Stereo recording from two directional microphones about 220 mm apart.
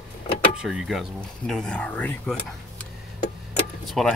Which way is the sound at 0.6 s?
Centre (ahead or behind).